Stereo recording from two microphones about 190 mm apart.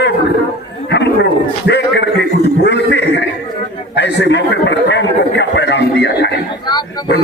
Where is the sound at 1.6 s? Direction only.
65° left (ahead or behind).